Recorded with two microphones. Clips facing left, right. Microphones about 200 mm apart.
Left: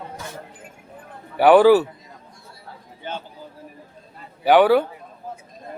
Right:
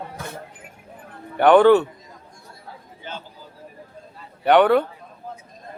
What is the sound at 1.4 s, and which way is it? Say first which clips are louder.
Speech: left 1 dB; 5° left (ahead or behind).